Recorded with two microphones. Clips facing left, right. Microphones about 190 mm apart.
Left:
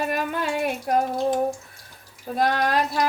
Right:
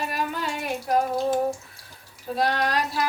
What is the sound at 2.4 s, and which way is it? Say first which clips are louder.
Speech: left 2 dB; 50° left (ahead or behind).